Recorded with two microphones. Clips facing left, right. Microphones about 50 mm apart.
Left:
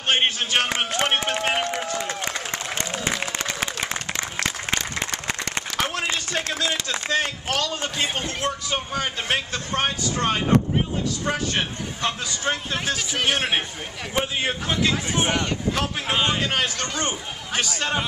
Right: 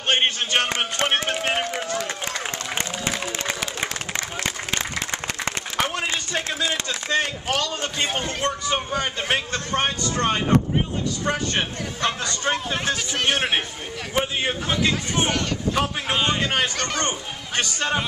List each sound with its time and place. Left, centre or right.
0.1 s speech: centre
5.8 s speech: centre
16.7 s speech: right
17.6 s speech: centre